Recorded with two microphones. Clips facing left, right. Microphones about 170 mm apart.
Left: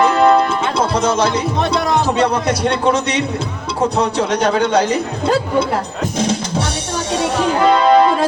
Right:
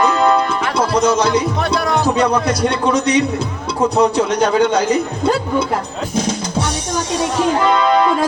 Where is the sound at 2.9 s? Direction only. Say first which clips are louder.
Right 4 dB; 30° left (ahead or behind).